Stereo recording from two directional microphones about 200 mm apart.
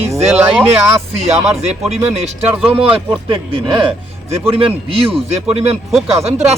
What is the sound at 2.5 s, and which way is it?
Speech, 10° right (ahead or behind).